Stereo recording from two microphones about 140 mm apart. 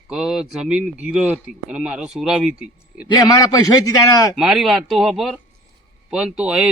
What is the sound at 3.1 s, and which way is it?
A man's voice, 30° left (ahead or behind).